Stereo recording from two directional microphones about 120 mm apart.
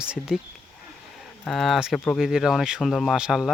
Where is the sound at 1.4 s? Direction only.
Centre (ahead or behind).